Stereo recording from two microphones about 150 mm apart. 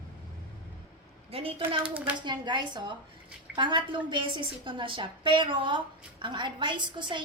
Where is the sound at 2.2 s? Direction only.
30° right (ahead or behind).